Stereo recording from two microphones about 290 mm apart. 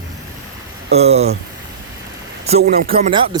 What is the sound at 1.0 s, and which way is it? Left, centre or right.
Speech, right.